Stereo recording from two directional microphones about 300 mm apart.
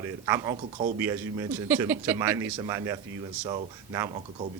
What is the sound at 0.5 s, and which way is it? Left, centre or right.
Speech, right.